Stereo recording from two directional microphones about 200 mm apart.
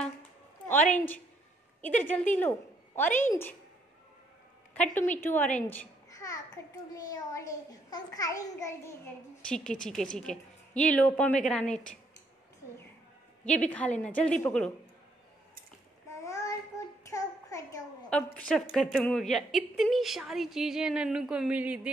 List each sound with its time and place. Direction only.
0.7 s a woman's voice: 5° left (ahead or behind)
4.9 s a child's voice: 10° left (ahead or behind)
7.9 s a child's voice: 20° left (ahead or behind)
13.5 s a child's voice: 5° left (ahead or behind)
16.1 s child singing: 15° left (ahead or behind)
17.1 s a sound: 15° left (ahead or behind)
18.1 s a child's voice: 5° left (ahead or behind)